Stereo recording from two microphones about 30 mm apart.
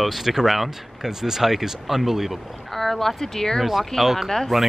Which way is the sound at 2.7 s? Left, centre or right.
Centre.